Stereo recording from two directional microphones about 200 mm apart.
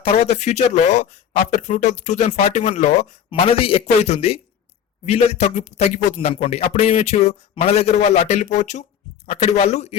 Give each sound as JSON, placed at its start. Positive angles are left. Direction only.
{"t": 0.0, "sound": "a man's voice", "side_deg": 30}